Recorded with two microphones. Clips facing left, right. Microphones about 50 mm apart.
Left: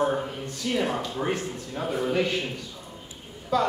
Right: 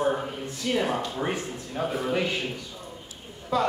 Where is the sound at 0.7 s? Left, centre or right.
Centre.